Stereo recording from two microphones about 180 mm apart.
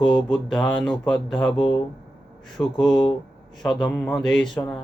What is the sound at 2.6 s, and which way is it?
Speech, 25° left (ahead or behind).